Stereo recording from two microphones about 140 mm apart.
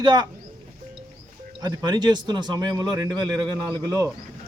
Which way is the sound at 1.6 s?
30° right (ahead or behind).